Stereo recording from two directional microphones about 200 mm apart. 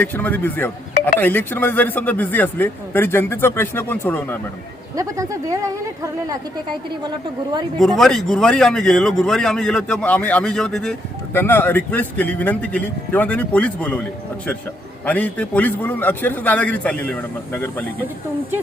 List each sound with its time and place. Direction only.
0.0 s speech: 10° left (ahead or behind)
4.9 s speech: 15° right (ahead or behind)
7.8 s a man's voice: centre (ahead or behind)